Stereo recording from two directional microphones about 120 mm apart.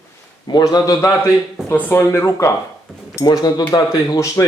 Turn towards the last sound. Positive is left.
turn(degrees=25)  # may be behind; listen again after turning